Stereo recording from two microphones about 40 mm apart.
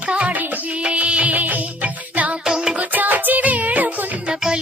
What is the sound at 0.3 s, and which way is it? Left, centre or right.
Music, right.